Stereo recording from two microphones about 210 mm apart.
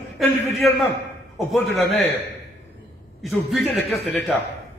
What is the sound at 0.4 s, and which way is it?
A man's voice, centre (ahead or behind).